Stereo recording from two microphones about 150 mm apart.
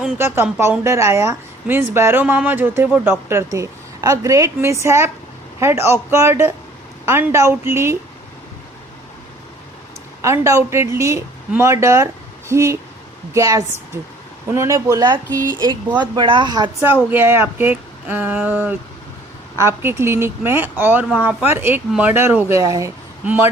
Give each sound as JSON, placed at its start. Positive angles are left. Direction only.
{"t": 0.2, "sound": "a woman's voice", "side_deg": -15}
{"t": 10.2, "sound": "a woman's voice", "side_deg": -20}
{"t": 16.8, "sound": "a woman's voice", "side_deg": -15}